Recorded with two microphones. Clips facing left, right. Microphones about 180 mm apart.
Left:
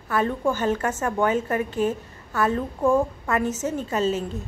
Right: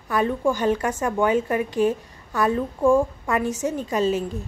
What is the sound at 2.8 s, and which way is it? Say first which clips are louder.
Speech: right 2 dB; 5° left (ahead or behind).